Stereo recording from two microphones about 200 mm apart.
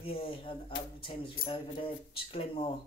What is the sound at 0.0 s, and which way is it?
Speech, 25° left (ahead or behind).